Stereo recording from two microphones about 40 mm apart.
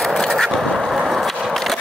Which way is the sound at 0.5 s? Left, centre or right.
Centre.